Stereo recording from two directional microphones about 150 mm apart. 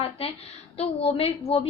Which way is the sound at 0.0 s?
40° left (ahead or behind).